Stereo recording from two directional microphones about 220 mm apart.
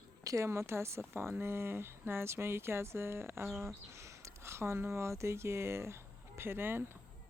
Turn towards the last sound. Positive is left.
turn(degrees=-10)  # may be behind; listen again after turning